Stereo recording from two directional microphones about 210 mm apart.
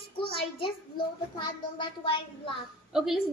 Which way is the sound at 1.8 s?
20° left (ahead or behind).